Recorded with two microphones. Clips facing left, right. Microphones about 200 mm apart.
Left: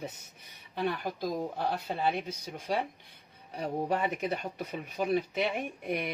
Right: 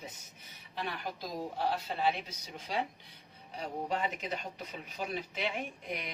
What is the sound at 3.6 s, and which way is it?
Speech, 60° left (ahead or behind).